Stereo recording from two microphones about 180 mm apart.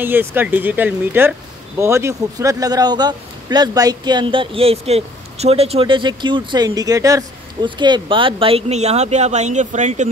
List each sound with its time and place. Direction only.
0.0 s speech: 10° right (ahead or behind); by 10.0 s 40° right (ahead or behind)